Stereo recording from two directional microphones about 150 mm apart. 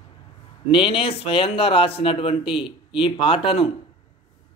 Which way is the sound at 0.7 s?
35° left (ahead or behind).